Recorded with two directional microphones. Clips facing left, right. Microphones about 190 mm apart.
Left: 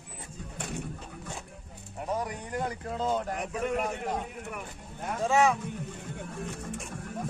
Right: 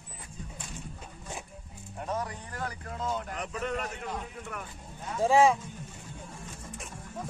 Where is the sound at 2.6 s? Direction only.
30° left (ahead or behind).